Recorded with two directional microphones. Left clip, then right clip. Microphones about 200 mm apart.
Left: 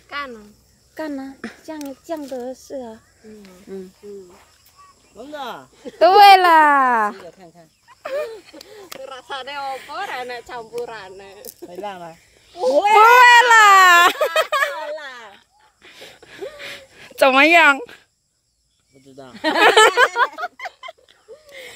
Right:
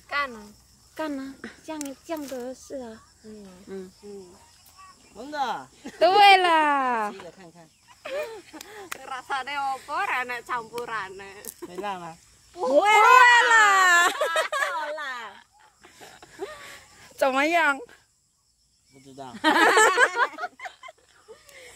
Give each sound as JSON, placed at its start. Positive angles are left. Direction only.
{"t": 0.9, "sound": "a child's voice", "side_deg": 25}
{"t": 5.1, "sound": "speech", "side_deg": 10}
{"t": 5.9, "sound": "a child's voice", "side_deg": 35}
{"t": 7.2, "sound": "speech", "side_deg": 5}
{"t": 8.0, "sound": "a child's voice", "side_deg": 35}
{"t": 8.5, "sound": "speech", "side_deg": -25}
{"t": 11.8, "sound": "speech", "side_deg": -5}
{"t": 13.1, "sound": "baby cry", "side_deg": 40}
{"t": 15.0, "sound": "a sound", "side_deg": 0}
{"t": 16.3, "sound": "a sound", "side_deg": 45}
{"t": 19.1, "sound": "speech", "side_deg": -5}
{"t": 19.6, "sound": "a sound", "side_deg": 40}